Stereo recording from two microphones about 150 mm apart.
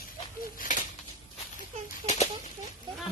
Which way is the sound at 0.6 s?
60° left (ahead or behind).